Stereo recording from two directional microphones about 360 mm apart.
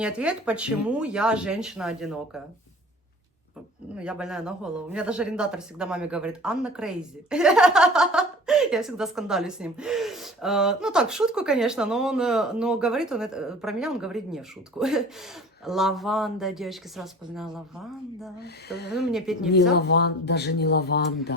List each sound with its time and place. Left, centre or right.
0.0 s speech: centre
3.9 s speech: centre
18.4 s speech: left
18.9 s speech: centre
19.7 s speech: left